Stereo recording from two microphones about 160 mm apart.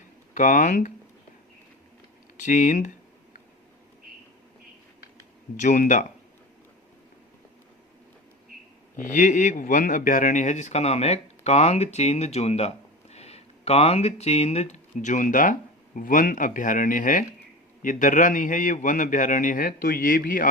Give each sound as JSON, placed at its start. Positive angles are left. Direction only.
{"t": 0.3, "sound": "speech", "side_deg": 55}
{"t": 2.4, "sound": "speech", "side_deg": 50}
{"t": 5.5, "sound": "speech", "side_deg": 55}
{"t": 9.0, "sound": "a man's voice", "side_deg": 50}